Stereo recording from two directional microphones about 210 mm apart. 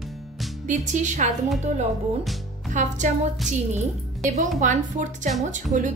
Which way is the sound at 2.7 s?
35° right (ahead or behind).